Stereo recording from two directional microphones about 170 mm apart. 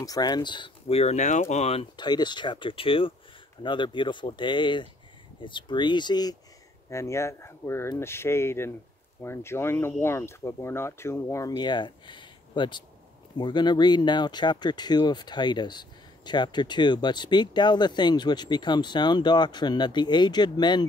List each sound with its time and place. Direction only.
0.0 s speech: 20° left (ahead or behind)